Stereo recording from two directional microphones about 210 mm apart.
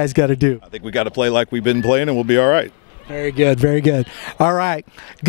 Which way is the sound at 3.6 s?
20° left (ahead or behind).